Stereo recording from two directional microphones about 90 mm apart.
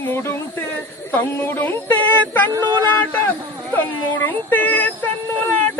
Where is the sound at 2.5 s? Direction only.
50° right (ahead or behind).